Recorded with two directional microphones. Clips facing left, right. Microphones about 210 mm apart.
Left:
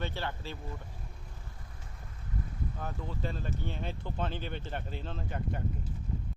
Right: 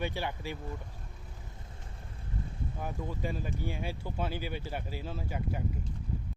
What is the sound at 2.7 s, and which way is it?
Speech, 10° right (ahead or behind).